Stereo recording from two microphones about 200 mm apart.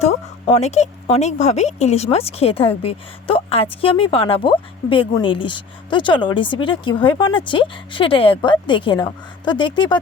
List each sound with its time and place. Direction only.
0.0 s speech: 30° left (ahead or behind)